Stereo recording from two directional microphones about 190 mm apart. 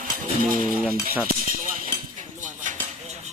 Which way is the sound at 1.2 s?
45° right (ahead or behind).